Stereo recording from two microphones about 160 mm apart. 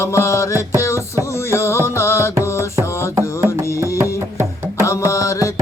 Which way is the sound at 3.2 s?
15° right (ahead or behind).